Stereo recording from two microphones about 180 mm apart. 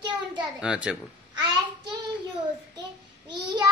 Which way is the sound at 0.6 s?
5° right (ahead or behind).